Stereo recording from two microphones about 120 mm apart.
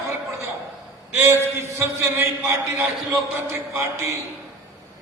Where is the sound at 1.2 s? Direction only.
20° right (ahead or behind).